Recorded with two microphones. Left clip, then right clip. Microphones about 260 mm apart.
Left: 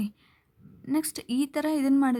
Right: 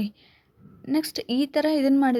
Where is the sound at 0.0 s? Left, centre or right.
Centre.